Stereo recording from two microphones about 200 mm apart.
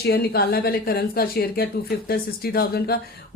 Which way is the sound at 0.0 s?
50° left (ahead or behind).